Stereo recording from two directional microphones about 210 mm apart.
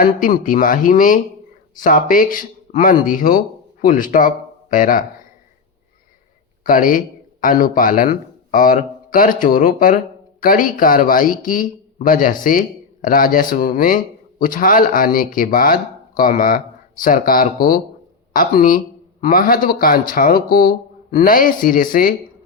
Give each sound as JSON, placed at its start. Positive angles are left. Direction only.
{"t": 0.0, "sound": "speech", "side_deg": 40}
{"t": 6.7, "sound": "speech", "side_deg": 40}